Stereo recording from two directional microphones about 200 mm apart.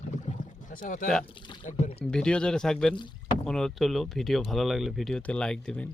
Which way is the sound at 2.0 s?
5° left (ahead or behind).